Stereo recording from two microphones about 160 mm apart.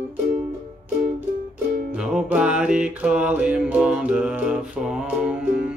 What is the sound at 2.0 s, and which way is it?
Music, 5° right (ahead or behind).